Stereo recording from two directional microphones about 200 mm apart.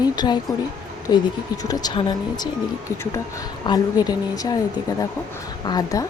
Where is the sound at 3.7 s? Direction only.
20° left (ahead or behind).